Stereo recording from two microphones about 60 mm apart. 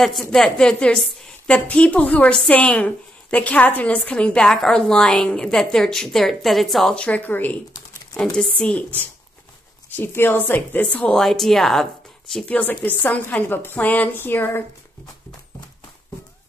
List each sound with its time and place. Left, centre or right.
0.0 s a woman's voice: centre
7.0 s a woman's voice: left
8.2 s a woman's voice: centre
8.7 s a woman's voice: left
11.1 s speech: centre
12.4 s a woman's voice: left